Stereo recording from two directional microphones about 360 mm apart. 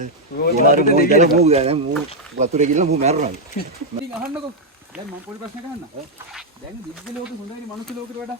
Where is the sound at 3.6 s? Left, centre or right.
Left.